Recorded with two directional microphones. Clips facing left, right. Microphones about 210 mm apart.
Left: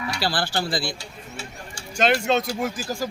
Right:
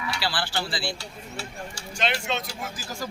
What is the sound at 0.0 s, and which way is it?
Speech, 40° left (ahead or behind).